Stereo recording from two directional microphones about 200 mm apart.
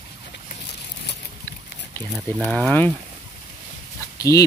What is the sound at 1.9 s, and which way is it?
Speech, 5° left (ahead or behind).